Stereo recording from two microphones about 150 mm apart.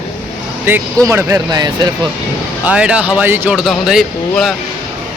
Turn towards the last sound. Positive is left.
turn(degrees=0)  # may be behind; listen again after turning